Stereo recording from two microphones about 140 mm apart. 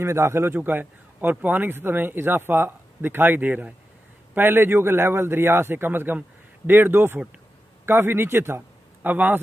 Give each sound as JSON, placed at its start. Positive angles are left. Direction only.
{"t": 0.0, "sound": "a man's voice", "side_deg": -20}